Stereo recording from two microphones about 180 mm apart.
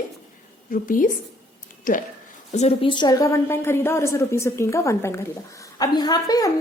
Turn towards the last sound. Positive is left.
turn(degrees=20)  # may be behind; listen again after turning